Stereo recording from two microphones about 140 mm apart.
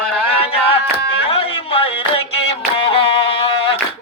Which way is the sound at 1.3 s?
40° left (ahead or behind).